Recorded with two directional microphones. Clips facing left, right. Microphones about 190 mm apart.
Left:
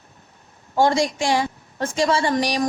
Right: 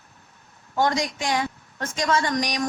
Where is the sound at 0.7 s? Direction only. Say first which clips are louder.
Left 5 dB; 30° left (ahead or behind).